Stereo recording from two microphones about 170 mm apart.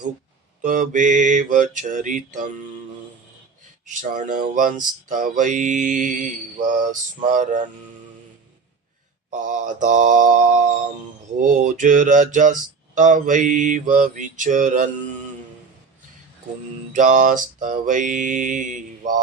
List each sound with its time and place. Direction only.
0.6 s speech: 50° right (ahead or behind)
4.1 s speech: 50° right (ahead or behind)
9.3 s speech: 45° right (ahead or behind)
16.9 s speech: 50° right (ahead or behind)